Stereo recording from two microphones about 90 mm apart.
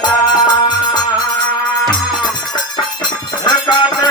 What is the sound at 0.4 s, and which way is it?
Music, 50° left (ahead or behind).